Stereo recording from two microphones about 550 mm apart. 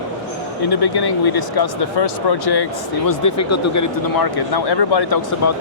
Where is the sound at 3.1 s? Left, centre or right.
Left.